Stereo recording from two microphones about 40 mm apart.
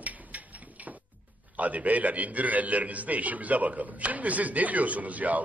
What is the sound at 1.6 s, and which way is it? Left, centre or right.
A man's voice, right.